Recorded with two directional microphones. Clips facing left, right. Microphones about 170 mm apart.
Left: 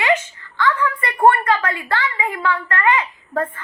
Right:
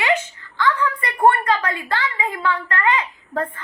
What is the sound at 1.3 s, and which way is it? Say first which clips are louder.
A woman's voice: left 2 dB; 15° right (ahead or behind).